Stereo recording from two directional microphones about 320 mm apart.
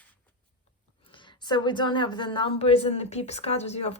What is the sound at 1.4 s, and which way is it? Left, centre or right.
A woman's voice, centre.